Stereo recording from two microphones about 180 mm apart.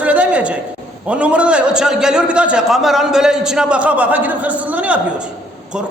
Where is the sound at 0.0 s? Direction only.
5° right (ahead or behind).